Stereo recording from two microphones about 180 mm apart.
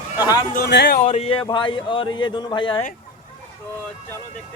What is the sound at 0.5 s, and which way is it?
Speech, 65° left (ahead or behind).